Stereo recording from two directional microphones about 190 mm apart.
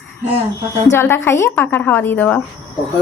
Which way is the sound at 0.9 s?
10° left (ahead or behind).